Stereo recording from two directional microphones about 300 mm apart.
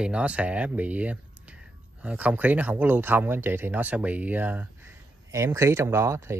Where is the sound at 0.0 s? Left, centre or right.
Centre.